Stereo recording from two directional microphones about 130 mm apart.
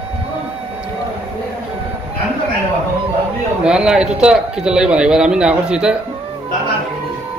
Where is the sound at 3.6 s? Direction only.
5° right (ahead or behind).